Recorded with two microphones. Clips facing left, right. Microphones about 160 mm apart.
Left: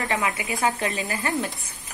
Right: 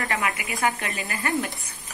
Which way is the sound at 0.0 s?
25° left (ahead or behind).